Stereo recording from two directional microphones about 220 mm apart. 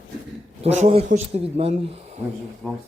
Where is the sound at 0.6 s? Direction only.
30° right (ahead or behind).